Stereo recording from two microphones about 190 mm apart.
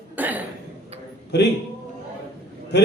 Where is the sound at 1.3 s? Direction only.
60° left (ahead or behind).